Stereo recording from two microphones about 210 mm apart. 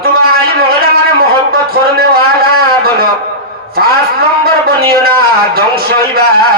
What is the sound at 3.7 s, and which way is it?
A man's voice, 45° right (ahead or behind).